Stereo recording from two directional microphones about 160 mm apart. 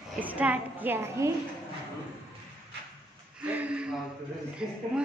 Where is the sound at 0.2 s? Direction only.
10° right (ahead or behind).